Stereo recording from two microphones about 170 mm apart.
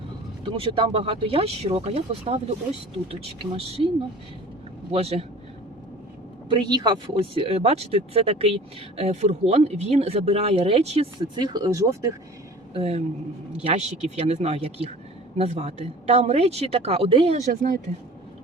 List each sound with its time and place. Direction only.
0.4 s speech: 30° right (ahead or behind)
4.9 s speech: 35° right (ahead or behind)
6.5 s speech: 25° right (ahead or behind)
11.3 s speech: 25° right (ahead or behind)
12.7 s speech: 35° right (ahead or behind)
17.3 s speech: 55° right (ahead or behind)